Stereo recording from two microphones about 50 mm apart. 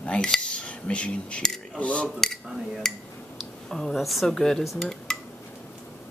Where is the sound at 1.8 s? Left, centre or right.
Left.